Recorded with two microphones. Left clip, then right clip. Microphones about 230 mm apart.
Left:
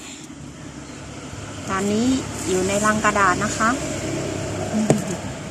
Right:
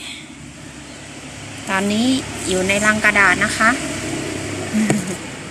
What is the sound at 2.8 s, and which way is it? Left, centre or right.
Speech, centre.